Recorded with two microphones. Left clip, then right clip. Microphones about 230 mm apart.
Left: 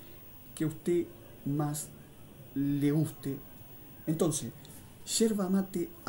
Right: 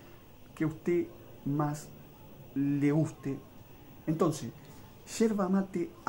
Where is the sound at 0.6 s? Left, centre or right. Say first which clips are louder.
Even; centre.